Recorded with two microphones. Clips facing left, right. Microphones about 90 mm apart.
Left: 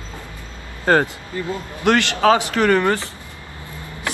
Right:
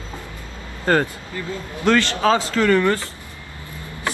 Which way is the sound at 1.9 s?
60° left (ahead or behind).